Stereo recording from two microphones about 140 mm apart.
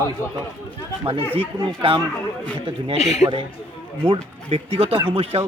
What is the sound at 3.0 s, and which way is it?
Speech, 55° left (ahead or behind).